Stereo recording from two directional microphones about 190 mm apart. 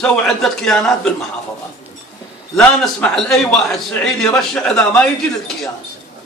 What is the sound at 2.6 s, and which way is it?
A man's voice, 5° left (ahead or behind).